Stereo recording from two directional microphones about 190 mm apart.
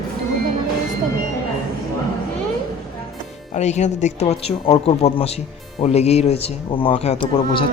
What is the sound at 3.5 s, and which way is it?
Speech, 35° left (ahead or behind).